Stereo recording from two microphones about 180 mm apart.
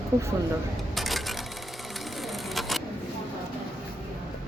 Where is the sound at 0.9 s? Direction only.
Centre (ahead or behind).